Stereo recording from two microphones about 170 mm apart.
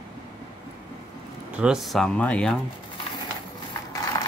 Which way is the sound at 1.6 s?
5° right (ahead or behind).